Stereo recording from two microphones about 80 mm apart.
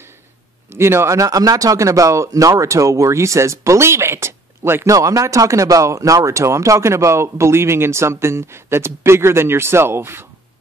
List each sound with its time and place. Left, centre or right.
0.7 s speech: right
4.9 s speech: right